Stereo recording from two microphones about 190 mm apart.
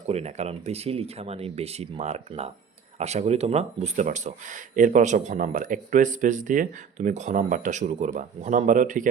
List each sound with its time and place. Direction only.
0.1 s speech: 35° right (ahead or behind)